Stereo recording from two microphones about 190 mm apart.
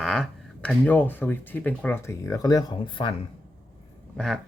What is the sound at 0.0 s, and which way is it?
Speech, 5° left (ahead or behind).